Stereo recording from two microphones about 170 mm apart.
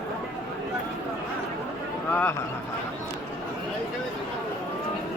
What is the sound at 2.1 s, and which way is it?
Speech, 10° left (ahead or behind).